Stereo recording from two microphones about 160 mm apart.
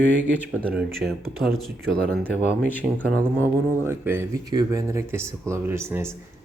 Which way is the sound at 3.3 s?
15° right (ahead or behind).